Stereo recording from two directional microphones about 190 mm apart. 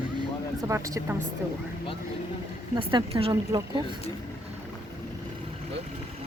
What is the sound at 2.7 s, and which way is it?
Speech, 25° right (ahead or behind).